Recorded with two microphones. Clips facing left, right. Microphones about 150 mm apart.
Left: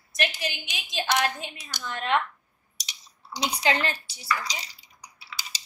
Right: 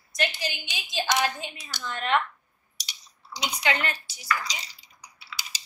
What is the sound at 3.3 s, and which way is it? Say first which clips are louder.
Speech: left 2 dB; 35° left (ahead or behind).